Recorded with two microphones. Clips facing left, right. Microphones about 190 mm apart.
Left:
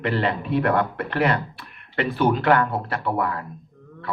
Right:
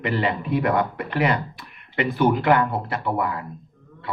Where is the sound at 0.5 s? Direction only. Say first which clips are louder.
Left 1 dB; 10° right (ahead or behind).